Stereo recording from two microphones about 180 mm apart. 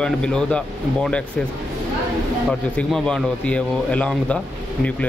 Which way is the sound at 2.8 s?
5° left (ahead or behind).